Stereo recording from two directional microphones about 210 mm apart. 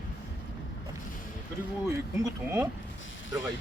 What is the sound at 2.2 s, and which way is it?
Speech, 10° right (ahead or behind).